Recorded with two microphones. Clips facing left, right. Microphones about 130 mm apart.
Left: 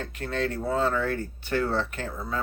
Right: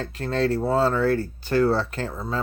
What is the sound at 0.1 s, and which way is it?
Speech, 35° right (ahead or behind).